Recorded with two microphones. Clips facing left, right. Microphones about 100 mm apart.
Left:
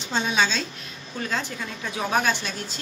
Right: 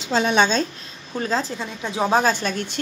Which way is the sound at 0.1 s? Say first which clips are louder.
Right 6 dB; 65° right (ahead or behind).